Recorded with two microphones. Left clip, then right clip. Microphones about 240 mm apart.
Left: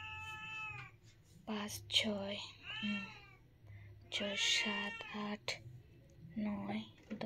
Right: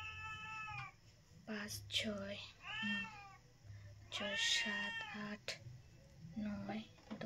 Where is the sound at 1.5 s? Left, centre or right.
Centre.